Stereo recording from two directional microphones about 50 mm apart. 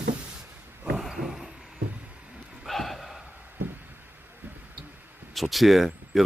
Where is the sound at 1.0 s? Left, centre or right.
Centre.